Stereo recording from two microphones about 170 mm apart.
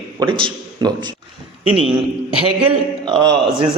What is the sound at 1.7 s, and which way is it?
Speech, 5° right (ahead or behind).